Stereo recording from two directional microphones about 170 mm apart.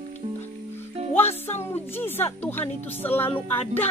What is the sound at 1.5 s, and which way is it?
A woman's voice, 15° left (ahead or behind).